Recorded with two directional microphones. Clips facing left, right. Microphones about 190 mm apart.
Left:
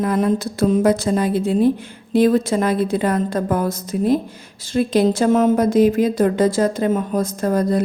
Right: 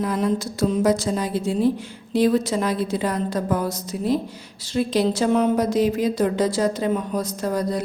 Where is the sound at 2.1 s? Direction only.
55° left (ahead or behind).